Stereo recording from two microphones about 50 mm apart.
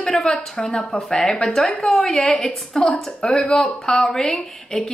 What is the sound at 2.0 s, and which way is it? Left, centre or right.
A woman's voice, centre.